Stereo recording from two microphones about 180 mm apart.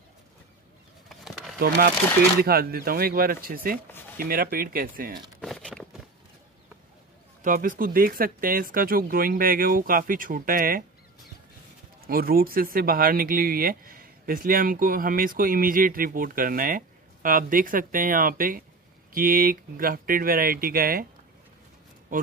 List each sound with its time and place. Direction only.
1.0 s a sound: centre (ahead or behind)
2.4 s speech: 55° right (ahead or behind)
5.4 s a sound: 5° left (ahead or behind)
7.4 s speech: 50° right (ahead or behind)
12.1 s speech: 55° right (ahead or behind)
22.1 s speech: 50° right (ahead or behind)